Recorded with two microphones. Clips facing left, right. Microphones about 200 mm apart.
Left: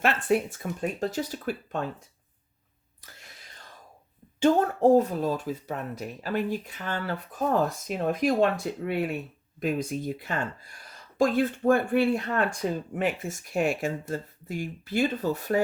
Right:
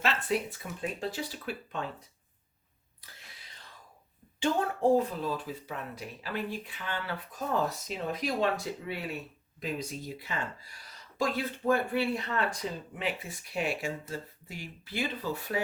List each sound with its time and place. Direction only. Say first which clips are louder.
0.0 s speech: left 6 dB; 50° left (ahead or behind)
4.4 s speech: left 7 dB; 45° left (ahead or behind)